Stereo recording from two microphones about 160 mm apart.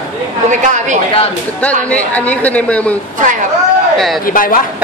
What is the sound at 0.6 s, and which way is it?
Speech, 50° right (ahead or behind).